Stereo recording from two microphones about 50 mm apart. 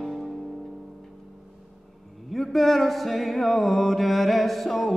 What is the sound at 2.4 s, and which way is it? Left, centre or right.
Music, centre.